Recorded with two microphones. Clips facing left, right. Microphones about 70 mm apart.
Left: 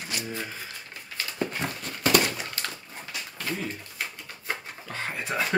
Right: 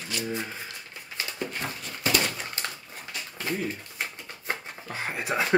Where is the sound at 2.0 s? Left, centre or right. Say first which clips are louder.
Left 4 dB; left.